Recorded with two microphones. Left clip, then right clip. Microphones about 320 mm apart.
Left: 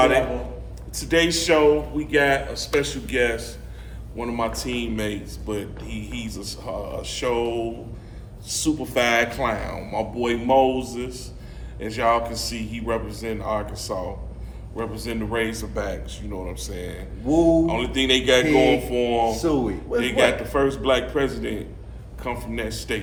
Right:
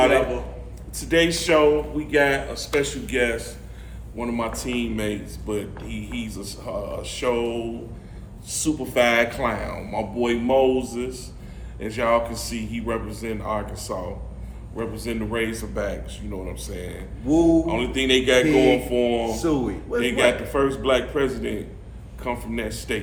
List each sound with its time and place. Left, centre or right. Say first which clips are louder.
0.9 s speech: even; centre
17.2 s speech: even; left
17.7 s speech: even; centre
18.4 s speech: even; left
18.9 s speech: left 1 dB; centre
19.3 s speech: left 1 dB; left
20.0 s speech: even; centre